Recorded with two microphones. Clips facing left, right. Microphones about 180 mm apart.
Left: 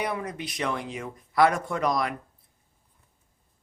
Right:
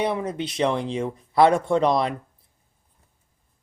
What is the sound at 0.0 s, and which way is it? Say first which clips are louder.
Speech: right 6 dB; 25° right (ahead or behind).